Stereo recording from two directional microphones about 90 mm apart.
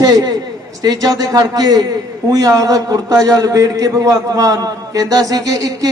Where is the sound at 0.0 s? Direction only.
45° right (ahead or behind).